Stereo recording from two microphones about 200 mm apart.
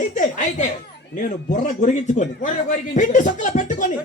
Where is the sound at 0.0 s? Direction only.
40° left (ahead or behind).